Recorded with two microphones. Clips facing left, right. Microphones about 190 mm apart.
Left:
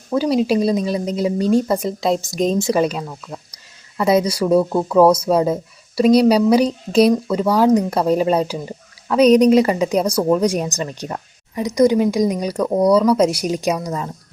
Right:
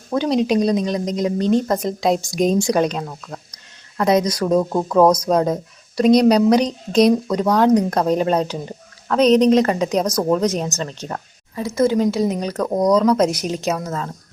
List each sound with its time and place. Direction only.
0.1 s speech: 5° left (ahead or behind)